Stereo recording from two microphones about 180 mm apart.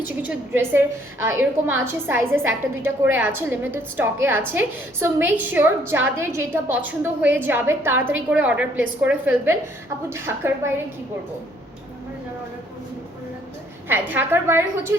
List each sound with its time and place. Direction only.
0.2 s a woman's voice: 10° right (ahead or behind)
13.8 s a woman's voice: 10° right (ahead or behind)